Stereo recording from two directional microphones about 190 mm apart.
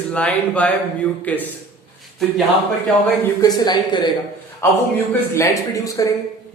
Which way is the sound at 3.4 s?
20° left (ahead or behind).